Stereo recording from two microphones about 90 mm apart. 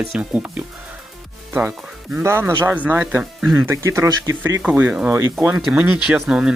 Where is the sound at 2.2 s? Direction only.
30° right (ahead or behind).